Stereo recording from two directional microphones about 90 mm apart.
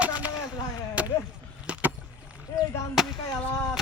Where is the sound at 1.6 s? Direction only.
15° right (ahead or behind).